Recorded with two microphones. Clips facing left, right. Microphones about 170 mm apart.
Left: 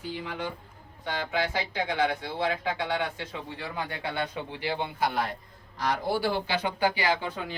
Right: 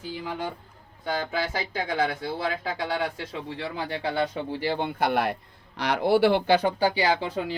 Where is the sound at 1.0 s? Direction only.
40° right (ahead or behind).